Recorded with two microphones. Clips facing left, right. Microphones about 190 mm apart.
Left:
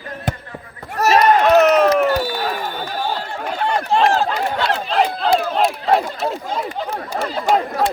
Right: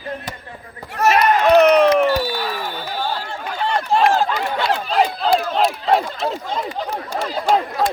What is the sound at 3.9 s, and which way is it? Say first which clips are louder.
Speech: even; centre (ahead or behind).